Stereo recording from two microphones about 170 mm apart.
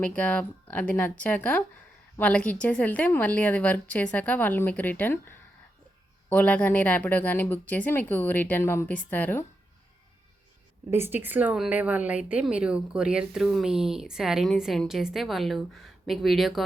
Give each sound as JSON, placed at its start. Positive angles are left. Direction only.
{"t": 0.0, "sound": "a woman's voice", "side_deg": 5}
{"t": 10.9, "sound": "a woman's voice", "side_deg": -15}